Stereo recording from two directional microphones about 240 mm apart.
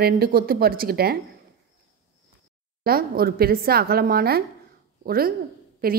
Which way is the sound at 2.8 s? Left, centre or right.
Right.